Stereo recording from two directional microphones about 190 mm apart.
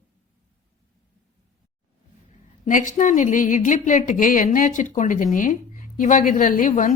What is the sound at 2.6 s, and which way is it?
A woman's voice, 40° left (ahead or behind).